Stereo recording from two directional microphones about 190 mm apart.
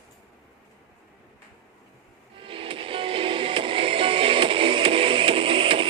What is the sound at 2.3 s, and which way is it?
Music, 30° right (ahead or behind).